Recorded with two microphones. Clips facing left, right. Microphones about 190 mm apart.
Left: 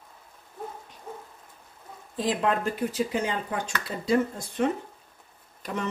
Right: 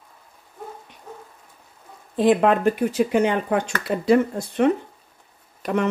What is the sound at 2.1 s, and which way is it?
Speech, 65° right (ahead or behind).